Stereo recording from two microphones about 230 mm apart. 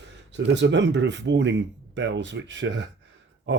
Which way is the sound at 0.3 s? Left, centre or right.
Right.